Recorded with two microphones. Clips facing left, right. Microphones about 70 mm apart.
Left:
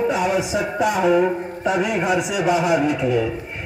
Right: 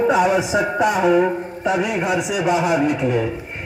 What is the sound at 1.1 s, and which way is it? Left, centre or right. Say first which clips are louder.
Speech: right 1 dB; centre.